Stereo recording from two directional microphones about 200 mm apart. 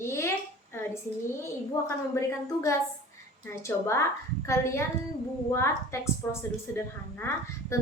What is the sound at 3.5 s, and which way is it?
A woman's voice, 15° left (ahead or behind).